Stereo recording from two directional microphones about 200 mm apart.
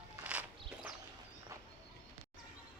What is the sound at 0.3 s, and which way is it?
Walk, 5° right (ahead or behind).